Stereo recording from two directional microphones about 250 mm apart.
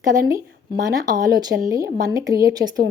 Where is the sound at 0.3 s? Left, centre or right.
Centre.